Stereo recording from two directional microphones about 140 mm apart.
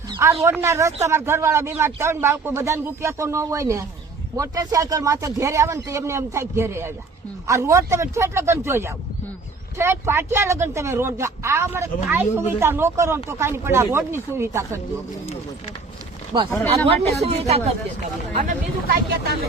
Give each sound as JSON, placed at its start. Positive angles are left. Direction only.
{"t": 0.2, "sound": "a man's voice", "side_deg": -20}
{"t": 16.3, "sound": "speech", "side_deg": -30}
{"t": 16.8, "sound": "speech", "side_deg": -45}
{"t": 18.4, "sound": "speech", "side_deg": -90}